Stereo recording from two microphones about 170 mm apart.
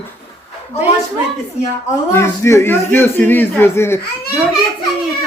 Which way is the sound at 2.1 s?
15° left (ahead or behind).